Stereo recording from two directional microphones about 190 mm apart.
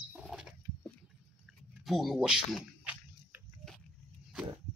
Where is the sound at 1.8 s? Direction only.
Centre (ahead or behind).